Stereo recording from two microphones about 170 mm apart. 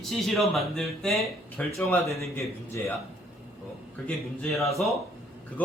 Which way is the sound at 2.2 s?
15° left (ahead or behind).